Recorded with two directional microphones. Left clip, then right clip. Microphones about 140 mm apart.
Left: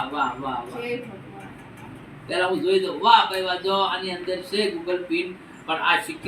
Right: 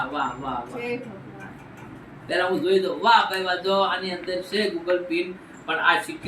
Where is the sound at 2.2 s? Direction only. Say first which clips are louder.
Even; 15° right (ahead or behind).